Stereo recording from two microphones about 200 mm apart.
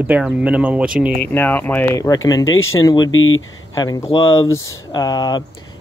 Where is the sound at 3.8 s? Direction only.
15° left (ahead or behind).